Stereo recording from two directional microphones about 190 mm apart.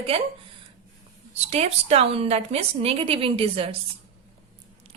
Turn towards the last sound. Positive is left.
turn(degrees=-30)  # may be behind; listen again after turning